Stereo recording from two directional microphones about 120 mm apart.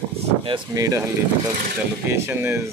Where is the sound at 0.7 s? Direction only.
30° right (ahead or behind).